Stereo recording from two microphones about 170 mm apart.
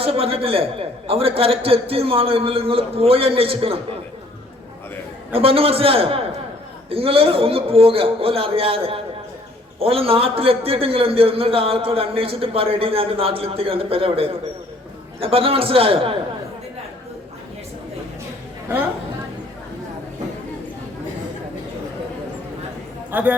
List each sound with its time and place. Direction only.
0.0 s a man's voice: 35° right (ahead or behind)
5.3 s a man's voice: 35° right (ahead or behind)
23.1 s speech: 10° right (ahead or behind)